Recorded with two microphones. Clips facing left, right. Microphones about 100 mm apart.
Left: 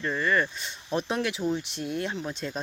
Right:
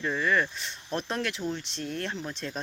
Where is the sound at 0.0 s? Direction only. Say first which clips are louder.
Left 1 dB; centre (ahead or behind).